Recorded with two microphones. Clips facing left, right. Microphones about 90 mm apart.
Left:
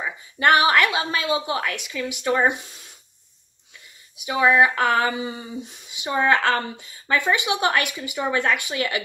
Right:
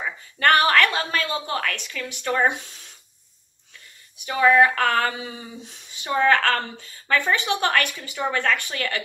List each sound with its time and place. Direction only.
0.0 s a woman's voice: 15° left (ahead or behind)
4.2 s a woman's voice: 15° left (ahead or behind)
5.1 s a sound: 5° left (ahead or behind)
5.6 s a woman's voice: 15° left (ahead or behind)